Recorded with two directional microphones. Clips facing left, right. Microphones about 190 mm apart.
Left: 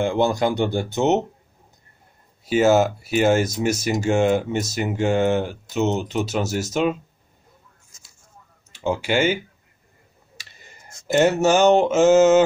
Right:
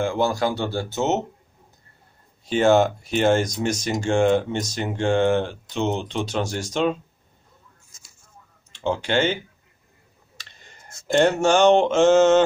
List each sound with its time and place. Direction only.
0.0 s speech: 20° left (ahead or behind)
2.4 s speech: 5° left (ahead or behind)
8.7 s speech: 10° left (ahead or behind)